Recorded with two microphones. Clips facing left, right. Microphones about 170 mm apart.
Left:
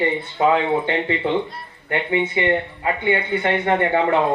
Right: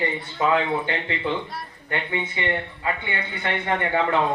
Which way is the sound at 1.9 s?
25° left (ahead or behind).